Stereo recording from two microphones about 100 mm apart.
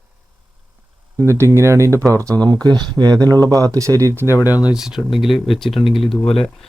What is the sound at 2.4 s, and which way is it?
Speech, 45° right (ahead or behind).